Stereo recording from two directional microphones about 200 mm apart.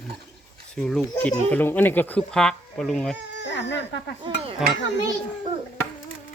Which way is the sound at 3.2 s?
60° left (ahead or behind).